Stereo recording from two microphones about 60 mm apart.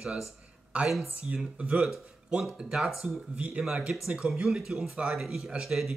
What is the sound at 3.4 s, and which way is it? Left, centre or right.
Speech, right.